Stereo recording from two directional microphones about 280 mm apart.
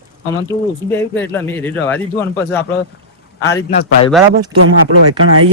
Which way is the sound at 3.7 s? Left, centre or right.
Left.